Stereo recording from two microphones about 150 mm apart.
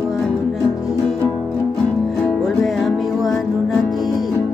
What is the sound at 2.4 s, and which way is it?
Music, centre (ahead or behind).